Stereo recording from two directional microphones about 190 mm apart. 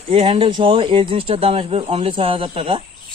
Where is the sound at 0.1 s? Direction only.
30° right (ahead or behind).